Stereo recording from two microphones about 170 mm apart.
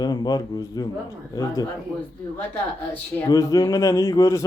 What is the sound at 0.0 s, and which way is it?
Speech, 25° left (ahead or behind).